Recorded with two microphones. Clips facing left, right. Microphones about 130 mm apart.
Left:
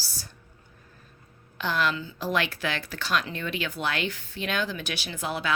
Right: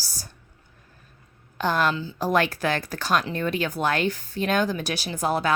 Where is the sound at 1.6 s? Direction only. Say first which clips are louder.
Right 4 dB; 45° right (ahead or behind).